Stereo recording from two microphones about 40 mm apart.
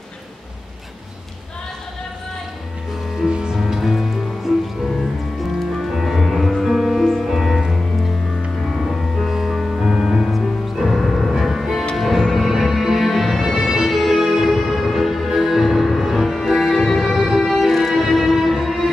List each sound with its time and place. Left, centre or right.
3.3 s music: right
3.5 s music: centre
5.8 s music: centre
7.2 s music: centre
8.6 s music: centre
9.8 s music: centre